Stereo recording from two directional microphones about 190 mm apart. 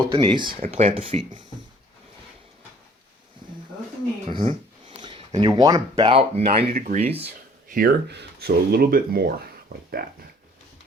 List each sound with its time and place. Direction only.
0.1 s speech: 25° right (ahead or behind)
4.3 s a sound: 30° right (ahead or behind)
6.0 s speech: 30° right (ahead or behind)
6.7 s speech: 45° right (ahead or behind)
7.0 s speech: 30° right (ahead or behind)
7.7 s speech: 55° right (ahead or behind)